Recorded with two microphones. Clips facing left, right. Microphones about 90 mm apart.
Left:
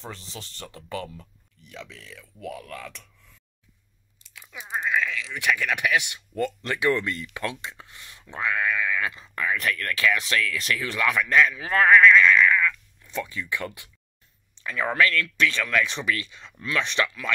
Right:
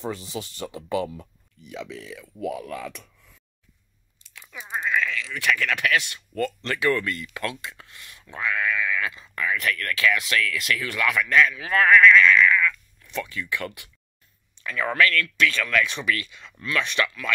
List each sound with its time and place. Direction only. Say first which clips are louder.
0.0 s speech: right 8 dB; 10° right (ahead or behind)
4.3 s a sound: right 1 dB; 5° left (ahead or behind)
4.7 s speech: right 1 dB; 15° left (ahead or behind)